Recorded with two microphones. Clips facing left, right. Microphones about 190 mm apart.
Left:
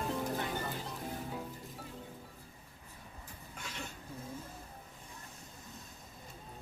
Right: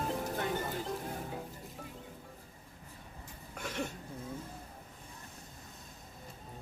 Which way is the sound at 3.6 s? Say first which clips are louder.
Right 8 dB; 60° right (ahead or behind).